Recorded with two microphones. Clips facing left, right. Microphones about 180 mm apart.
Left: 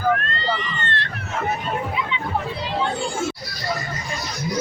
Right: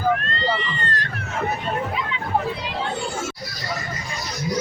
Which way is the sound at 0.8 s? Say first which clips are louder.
Even; 35° right (ahead or behind).